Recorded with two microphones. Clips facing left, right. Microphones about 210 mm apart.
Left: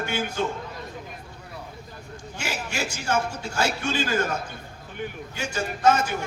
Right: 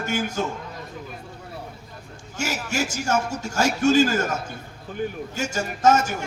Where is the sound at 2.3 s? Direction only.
45° right (ahead or behind).